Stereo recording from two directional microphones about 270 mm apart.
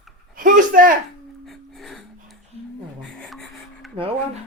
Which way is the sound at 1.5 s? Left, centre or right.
Centre.